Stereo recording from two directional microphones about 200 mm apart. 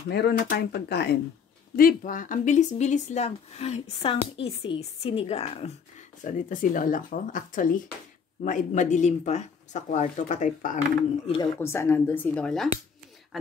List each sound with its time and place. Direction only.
0.1 s speech: 55° left (ahead or behind)
11.4 s speech: 10° left (ahead or behind)